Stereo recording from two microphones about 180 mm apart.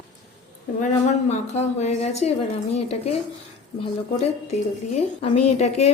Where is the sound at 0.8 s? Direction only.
40° left (ahead or behind).